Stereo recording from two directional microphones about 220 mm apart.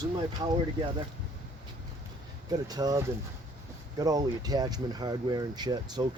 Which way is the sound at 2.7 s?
15° right (ahead or behind).